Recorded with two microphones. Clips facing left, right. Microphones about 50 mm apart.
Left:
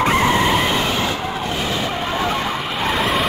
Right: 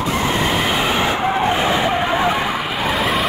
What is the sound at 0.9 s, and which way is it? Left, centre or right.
Vehicle, right.